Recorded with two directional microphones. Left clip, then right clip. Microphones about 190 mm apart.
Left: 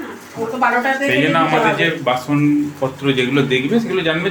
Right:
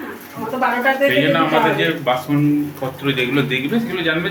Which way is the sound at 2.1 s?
20° left (ahead or behind).